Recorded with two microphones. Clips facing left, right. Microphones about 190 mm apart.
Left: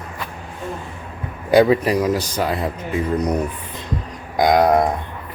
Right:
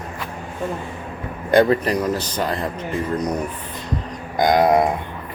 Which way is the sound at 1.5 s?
5° left (ahead or behind).